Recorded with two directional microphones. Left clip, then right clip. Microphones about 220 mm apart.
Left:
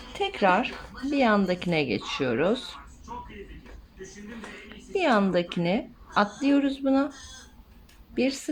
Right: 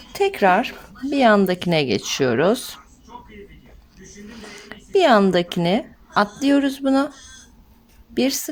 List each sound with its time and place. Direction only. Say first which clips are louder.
0.1 s a woman's voice: right 6 dB; 45° right (ahead or behind)
4.7 s a woman's voice: right 9 dB; 50° right (ahead or behind)
8.1 s a woman's voice: right 6 dB; 50° right (ahead or behind)